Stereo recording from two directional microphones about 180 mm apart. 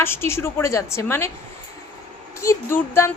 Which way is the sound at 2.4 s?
15° left (ahead or behind).